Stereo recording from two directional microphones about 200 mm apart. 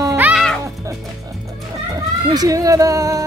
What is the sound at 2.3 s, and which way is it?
Speech, 15° right (ahead or behind).